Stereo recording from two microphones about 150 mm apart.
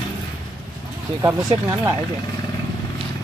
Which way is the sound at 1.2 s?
15° right (ahead or behind).